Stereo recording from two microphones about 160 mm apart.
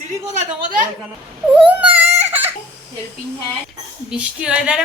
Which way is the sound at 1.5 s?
10° right (ahead or behind).